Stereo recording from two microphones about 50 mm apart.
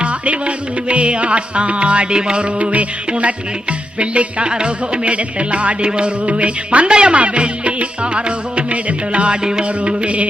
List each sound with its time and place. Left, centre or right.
0.0 s music: right